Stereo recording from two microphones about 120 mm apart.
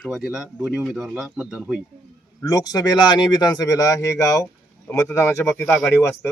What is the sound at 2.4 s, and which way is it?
Speech, 30° left (ahead or behind).